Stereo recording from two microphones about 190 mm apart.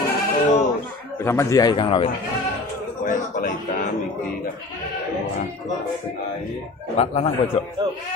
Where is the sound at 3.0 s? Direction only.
45° left (ahead or behind).